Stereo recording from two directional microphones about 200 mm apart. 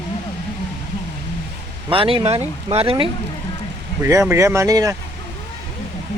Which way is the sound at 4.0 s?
15° right (ahead or behind).